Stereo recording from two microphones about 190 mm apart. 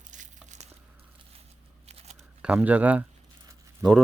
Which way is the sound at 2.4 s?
10° right (ahead or behind).